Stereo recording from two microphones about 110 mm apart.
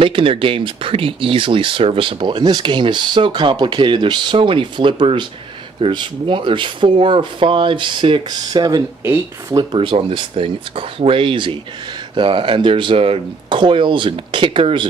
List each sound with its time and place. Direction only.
0.0 s speech: 55° right (ahead or behind)
9.8 s speech: 55° right (ahead or behind)